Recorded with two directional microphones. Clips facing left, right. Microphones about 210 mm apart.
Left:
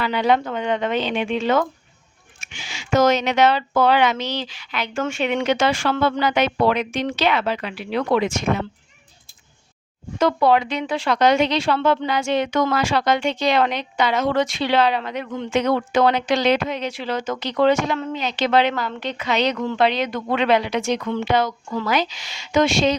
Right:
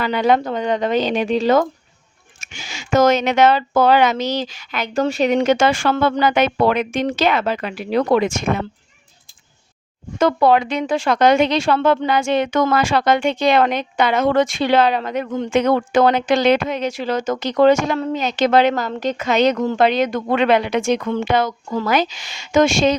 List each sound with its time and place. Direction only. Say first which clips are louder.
0.0 s a woman's voice: right 3 dB; 45° right (ahead or behind)
10.2 s a woman's voice: right 2 dB; 50° right (ahead or behind)